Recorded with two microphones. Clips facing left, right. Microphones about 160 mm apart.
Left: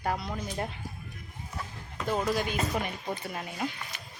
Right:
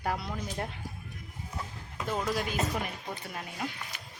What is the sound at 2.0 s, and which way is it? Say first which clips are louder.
Speech: left 3 dB; centre (ahead or behind).